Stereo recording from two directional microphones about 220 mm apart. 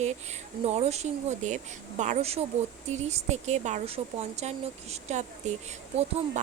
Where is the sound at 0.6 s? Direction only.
30° right (ahead or behind).